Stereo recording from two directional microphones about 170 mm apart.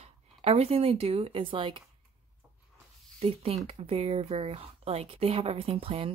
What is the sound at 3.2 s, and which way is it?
Speech, 35° right (ahead or behind).